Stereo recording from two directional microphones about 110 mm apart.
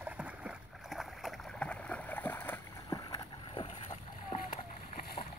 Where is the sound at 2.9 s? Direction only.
35° left (ahead or behind).